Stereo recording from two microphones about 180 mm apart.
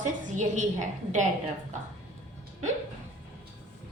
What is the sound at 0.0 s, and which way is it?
A woman's voice, 40° right (ahead or behind).